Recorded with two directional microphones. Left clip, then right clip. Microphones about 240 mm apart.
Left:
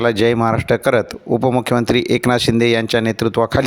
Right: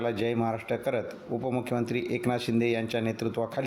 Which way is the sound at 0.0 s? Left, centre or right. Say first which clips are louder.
Left 14 dB; left.